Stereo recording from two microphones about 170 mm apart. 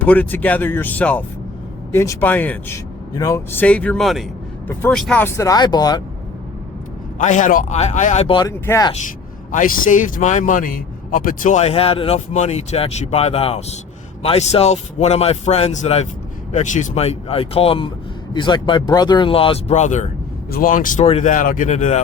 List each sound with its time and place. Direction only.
0.0 s speech: 10° left (ahead or behind)
5.2 s speech: 20° left (ahead or behind)
7.2 s a man's voice: 45° left (ahead or behind)
8.4 s speech: 20° left (ahead or behind)
9.5 s a man's voice: 50° left (ahead or behind)
21.0 s a man's voice: 40° left (ahead or behind)